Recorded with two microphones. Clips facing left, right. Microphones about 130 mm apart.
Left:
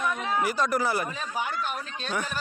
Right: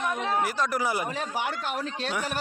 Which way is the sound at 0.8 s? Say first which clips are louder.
Left 1 dB; 15° right (ahead or behind).